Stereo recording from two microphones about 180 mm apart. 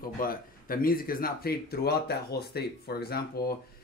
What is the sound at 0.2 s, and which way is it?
Speech, 50° left (ahead or behind).